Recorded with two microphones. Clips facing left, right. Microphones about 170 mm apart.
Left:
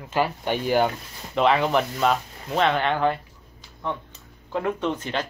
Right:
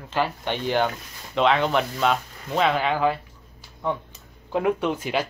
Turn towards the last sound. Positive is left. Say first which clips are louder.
# right 2 dB
turn(degrees=-10)  # may be behind; listen again after turning